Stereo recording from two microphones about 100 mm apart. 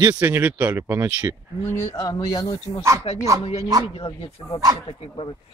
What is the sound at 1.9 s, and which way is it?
Speech, 40° left (ahead or behind).